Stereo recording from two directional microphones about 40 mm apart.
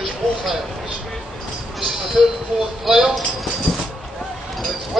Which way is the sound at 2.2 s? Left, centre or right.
Centre.